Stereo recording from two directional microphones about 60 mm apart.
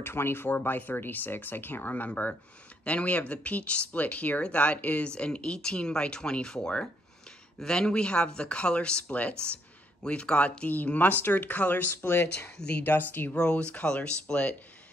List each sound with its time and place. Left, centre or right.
0.0 s speech: left
12.5 s speech: centre
12.8 s speech: left
13.3 s speech: centre